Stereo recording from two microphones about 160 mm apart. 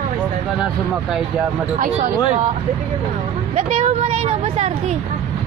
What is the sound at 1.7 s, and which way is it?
Speech, 50° right (ahead or behind).